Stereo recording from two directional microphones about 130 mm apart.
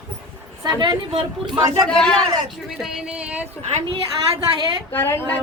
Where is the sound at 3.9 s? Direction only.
40° right (ahead or behind).